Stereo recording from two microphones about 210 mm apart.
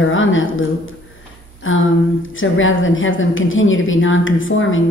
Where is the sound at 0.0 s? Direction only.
70° left (ahead or behind).